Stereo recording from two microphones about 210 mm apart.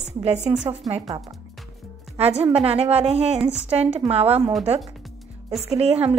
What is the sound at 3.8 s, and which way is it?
Speech, 30° right (ahead or behind).